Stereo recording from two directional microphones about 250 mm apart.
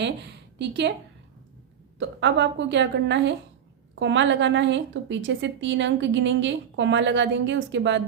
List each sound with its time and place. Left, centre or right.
0.0 s a woman's voice: right
2.0 s a woman's voice: right